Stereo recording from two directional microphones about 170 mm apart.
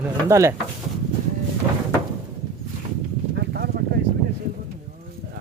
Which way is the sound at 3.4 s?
70° right (ahead or behind).